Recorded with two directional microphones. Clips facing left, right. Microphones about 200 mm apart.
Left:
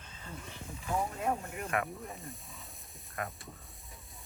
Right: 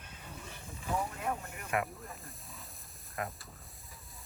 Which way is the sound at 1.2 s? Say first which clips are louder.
Left 4 dB; 25° left (ahead or behind).